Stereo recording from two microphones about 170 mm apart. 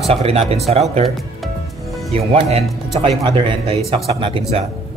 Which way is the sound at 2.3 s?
40° right (ahead or behind).